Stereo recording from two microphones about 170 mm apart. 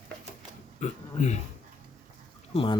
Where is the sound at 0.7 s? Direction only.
45° left (ahead or behind).